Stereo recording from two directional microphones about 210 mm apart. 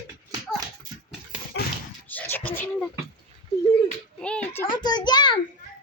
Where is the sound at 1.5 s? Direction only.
55° left (ahead or behind).